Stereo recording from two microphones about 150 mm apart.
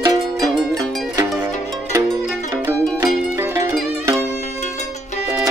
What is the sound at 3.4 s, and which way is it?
Music, 20° right (ahead or behind).